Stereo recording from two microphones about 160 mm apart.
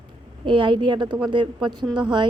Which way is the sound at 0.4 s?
30° right (ahead or behind).